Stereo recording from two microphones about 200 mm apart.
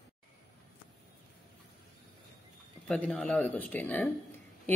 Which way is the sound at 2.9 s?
5° left (ahead or behind).